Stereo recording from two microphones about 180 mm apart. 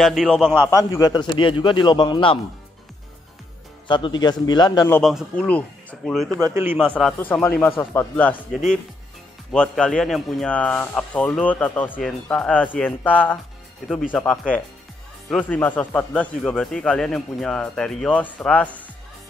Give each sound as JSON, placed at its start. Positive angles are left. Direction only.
{"t": 0.0, "sound": "speech", "side_deg": 0}
{"t": 0.7, "sound": "a man's voice", "side_deg": 20}
{"t": 3.8, "sound": "a man's voice", "side_deg": 25}
{"t": 5.0, "sound": "speech", "side_deg": 5}
{"t": 6.3, "sound": "a man's voice", "side_deg": -15}
{"t": 6.8, "sound": "speech", "side_deg": 5}